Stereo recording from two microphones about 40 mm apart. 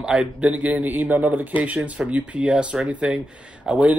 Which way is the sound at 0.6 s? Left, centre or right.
Right.